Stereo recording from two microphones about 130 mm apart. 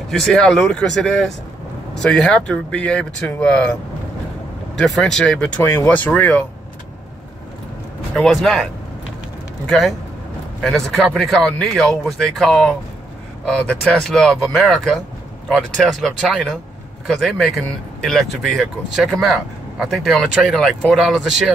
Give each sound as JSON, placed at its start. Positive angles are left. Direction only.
{"t": 0.2, "sound": "speech", "side_deg": 5}
{"t": 4.7, "sound": "speech", "side_deg": 5}
{"t": 5.6, "sound": "speech", "side_deg": 20}
{"t": 8.2, "sound": "speech", "side_deg": 0}
{"t": 9.7, "sound": "speech", "side_deg": 0}